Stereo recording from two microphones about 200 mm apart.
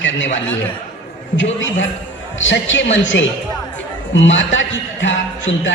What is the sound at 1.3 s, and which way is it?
A man's voice, 65° left (ahead or behind).